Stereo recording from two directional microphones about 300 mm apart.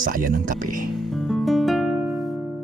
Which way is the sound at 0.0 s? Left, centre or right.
Right.